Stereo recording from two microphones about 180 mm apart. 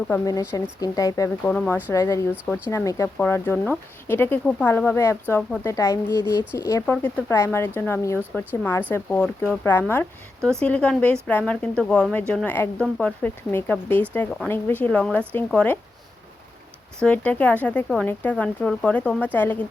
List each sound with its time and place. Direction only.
0.1 s speech: 20° left (ahead or behind)
1.5 s speech: 5° left (ahead or behind)
1.9 s speech: 15° left (ahead or behind)
17.0 s speech: 5° left (ahead or behind)